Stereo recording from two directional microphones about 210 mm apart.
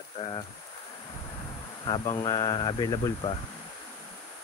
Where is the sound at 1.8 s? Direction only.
20° left (ahead or behind).